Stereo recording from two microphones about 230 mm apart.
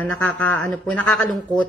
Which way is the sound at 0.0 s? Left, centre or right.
Centre.